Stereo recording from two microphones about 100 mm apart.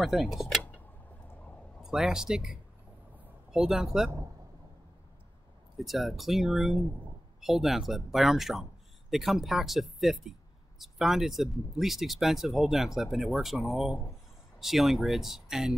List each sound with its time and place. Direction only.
0.0 s speech: centre (ahead or behind)
1.8 s speech: 5° right (ahead or behind)
5.8 s speech: centre (ahead or behind)